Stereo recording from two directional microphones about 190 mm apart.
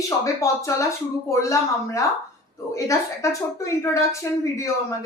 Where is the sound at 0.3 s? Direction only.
15° left (ahead or behind).